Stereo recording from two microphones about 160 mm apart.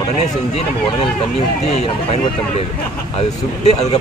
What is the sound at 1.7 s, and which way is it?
Speech, 40° left (ahead or behind).